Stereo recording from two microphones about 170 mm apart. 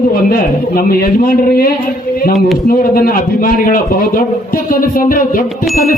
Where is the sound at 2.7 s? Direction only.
60° left (ahead or behind).